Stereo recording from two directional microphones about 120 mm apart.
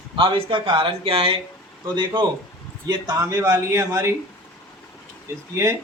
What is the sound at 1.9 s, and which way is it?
Speech, 40° right (ahead or behind).